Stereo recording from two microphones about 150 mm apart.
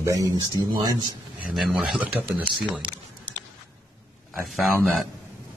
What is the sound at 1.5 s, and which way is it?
Speech, 5° right (ahead or behind).